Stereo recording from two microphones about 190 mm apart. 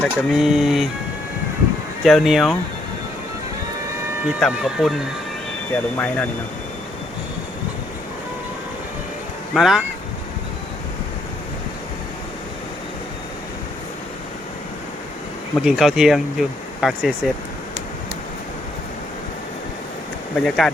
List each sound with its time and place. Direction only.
0.0 s speech: centre (ahead or behind)
2.0 s speech: centre (ahead or behind)
4.3 s speech: centre (ahead or behind)
9.6 s speech: centre (ahead or behind)
15.5 s speech: centre (ahead or behind)
20.3 s speech: 5° left (ahead or behind)